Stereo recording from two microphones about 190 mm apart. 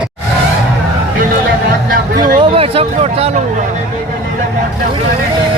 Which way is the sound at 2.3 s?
30° right (ahead or behind).